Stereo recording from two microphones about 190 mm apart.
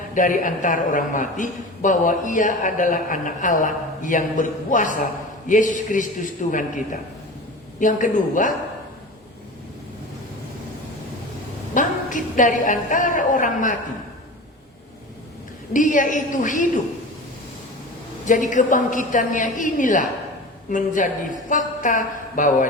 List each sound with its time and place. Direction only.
0.1 s a man's voice: 45° left (ahead or behind)
11.7 s a woman's voice: 45° left (ahead or behind)
15.7 s a man's voice: 45° left (ahead or behind)
18.3 s a man's voice: 40° left (ahead or behind)